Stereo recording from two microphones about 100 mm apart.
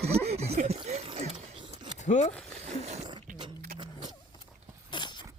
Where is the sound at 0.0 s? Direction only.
90° right.